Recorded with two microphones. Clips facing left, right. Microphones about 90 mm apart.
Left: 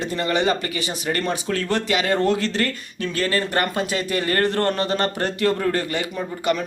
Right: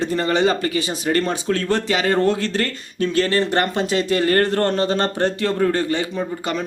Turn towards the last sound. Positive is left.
turn(degrees=-30)  # may be behind; listen again after turning